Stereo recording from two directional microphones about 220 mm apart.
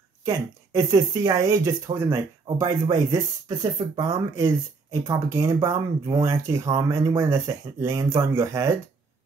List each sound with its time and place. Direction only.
0.2 s speech: 15° right (ahead or behind)